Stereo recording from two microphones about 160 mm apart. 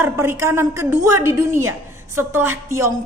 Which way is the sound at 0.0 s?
15° right (ahead or behind).